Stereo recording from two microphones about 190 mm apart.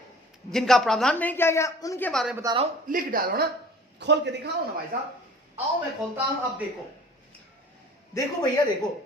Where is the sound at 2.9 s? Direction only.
50° right (ahead or behind).